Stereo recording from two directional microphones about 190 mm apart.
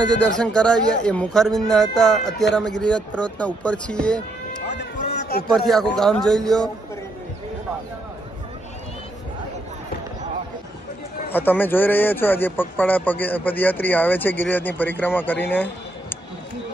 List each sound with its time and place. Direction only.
0.2 s speech: 5° left (ahead or behind)
5.0 s a sound: 60° left (ahead or behind)
5.5 s speech: centre (ahead or behind)
11.3 s a man's voice: 10° left (ahead or behind)